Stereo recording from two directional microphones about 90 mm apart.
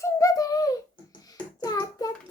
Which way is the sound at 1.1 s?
45° left (ahead or behind).